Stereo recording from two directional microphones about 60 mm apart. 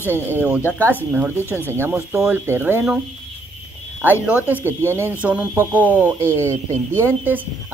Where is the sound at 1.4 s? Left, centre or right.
Left.